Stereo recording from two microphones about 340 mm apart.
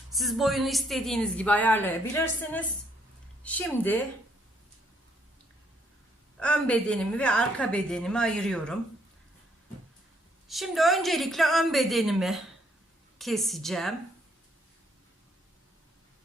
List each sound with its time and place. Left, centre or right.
0.1 s a woman's voice: centre
6.4 s a woman's voice: centre
10.5 s a woman's voice: centre